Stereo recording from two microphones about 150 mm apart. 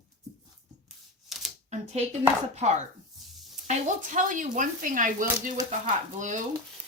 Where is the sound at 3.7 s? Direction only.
60° right (ahead or behind).